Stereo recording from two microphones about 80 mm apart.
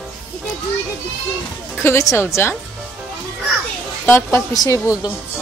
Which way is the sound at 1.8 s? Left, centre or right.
Left.